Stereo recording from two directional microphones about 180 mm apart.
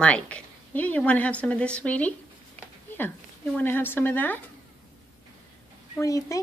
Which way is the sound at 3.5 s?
10° left (ahead or behind).